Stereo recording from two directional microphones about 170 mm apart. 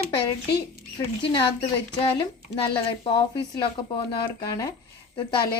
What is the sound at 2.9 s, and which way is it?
Speech, 30° left (ahead or behind).